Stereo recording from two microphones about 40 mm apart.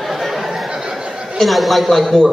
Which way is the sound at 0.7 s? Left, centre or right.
Centre.